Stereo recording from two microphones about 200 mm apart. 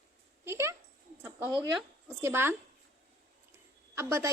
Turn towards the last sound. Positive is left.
turn(degrees=-15)  # may be behind; listen again after turning